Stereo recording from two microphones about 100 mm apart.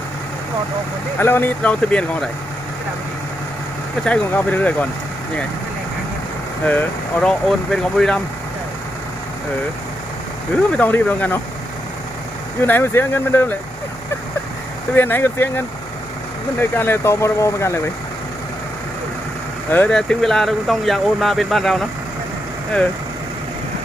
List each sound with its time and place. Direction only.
1.2 s speech: 20° left (ahead or behind)
4.0 s speech: 15° left (ahead or behind)
6.7 s speech: 15° left (ahead or behind)
10.7 s speech: 15° left (ahead or behind)
12.6 s speech: 20° left (ahead or behind)
14.9 s speech: 20° left (ahead or behind)
19.7 s speech: 20° left (ahead or behind)
20.0 s speech: 5° left (ahead or behind)